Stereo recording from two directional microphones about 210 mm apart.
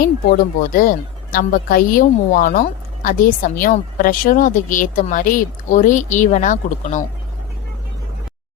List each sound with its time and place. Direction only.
0.0 s a woman's voice: 45° left (ahead or behind)